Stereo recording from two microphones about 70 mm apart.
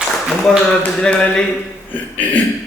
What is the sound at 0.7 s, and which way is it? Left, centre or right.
Speech, centre.